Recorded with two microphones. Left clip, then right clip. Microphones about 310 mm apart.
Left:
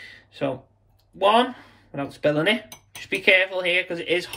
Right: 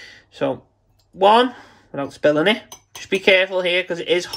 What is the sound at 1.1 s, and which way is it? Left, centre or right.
Speech, right.